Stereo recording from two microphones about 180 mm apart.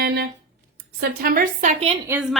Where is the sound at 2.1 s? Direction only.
5° right (ahead or behind).